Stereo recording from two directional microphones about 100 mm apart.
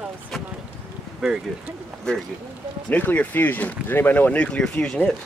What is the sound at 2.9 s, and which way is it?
Speech, 15° left (ahead or behind).